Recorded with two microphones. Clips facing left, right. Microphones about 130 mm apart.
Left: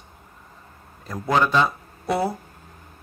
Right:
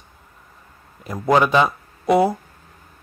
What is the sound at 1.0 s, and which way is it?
Speech, 10° right (ahead or behind).